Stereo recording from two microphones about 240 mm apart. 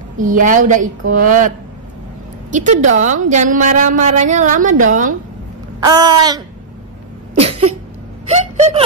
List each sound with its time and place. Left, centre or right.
0.2 s a woman's voice: right
2.5 s a woman's voice: right
5.9 s a sound: centre